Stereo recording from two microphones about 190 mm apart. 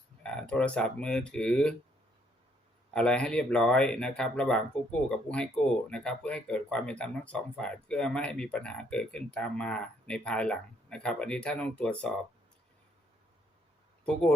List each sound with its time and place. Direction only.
0.2 s speech: 5° left (ahead or behind)
2.9 s speech: 5° left (ahead or behind)
14.0 s speech: 5° left (ahead or behind)